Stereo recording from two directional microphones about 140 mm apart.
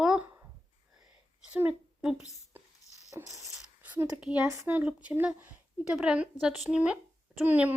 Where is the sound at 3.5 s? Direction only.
10° right (ahead or behind).